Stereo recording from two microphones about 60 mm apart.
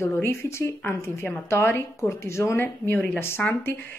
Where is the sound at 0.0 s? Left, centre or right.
Left.